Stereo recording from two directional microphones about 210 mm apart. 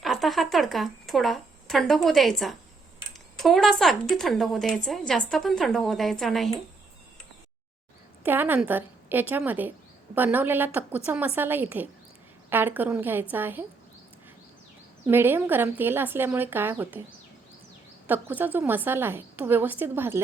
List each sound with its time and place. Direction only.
0.0 s a woman's voice: centre (ahead or behind)
8.2 s a woman's voice: 10° right (ahead or behind)
15.0 s a woman's voice: 10° right (ahead or behind)
18.0 s a woman's voice: 10° right (ahead or behind)